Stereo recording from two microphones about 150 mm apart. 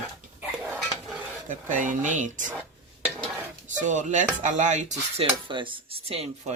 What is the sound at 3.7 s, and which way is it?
Speech, 55° right (ahead or behind).